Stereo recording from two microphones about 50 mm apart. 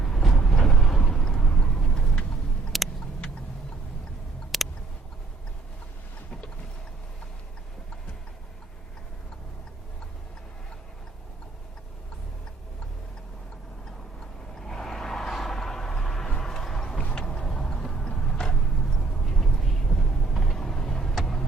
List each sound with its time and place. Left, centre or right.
0.0 s vehicle: centre
2.7 s vehicle: centre
4.5 s a sound: centre
14.6 s vehicle: centre
17.4 s tick-tock: centre
17.8 s a sound: centre